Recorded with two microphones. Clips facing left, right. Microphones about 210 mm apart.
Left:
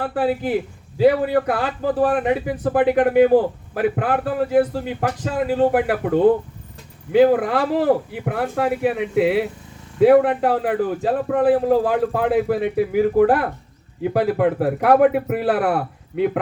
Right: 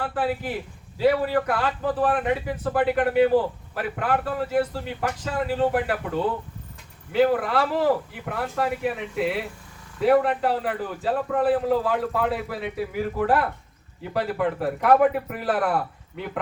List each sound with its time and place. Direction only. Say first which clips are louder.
0.0 s a man's voice: left 5 dB; 50° left (ahead or behind)